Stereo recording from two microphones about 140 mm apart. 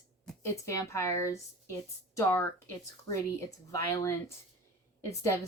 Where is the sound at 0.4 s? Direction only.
20° left (ahead or behind).